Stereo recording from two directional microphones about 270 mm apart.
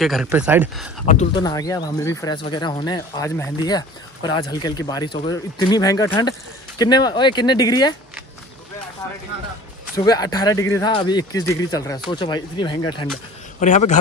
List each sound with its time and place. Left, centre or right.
0.0 s speech: centre
1.3 s speech: centre
9.9 s speech: centre
13.6 s a man's voice: left